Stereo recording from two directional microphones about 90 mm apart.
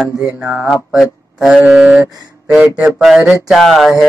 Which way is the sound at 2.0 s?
45° right (ahead or behind).